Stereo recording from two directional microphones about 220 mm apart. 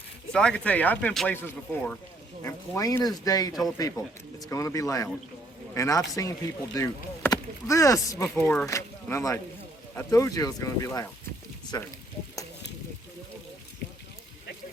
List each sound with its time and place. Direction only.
0.3 s speech: 5° left (ahead or behind)